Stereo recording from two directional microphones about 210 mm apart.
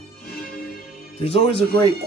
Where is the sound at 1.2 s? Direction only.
30° left (ahead or behind).